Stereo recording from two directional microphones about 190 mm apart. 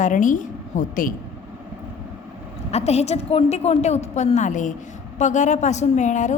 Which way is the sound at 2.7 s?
35° left (ahead or behind).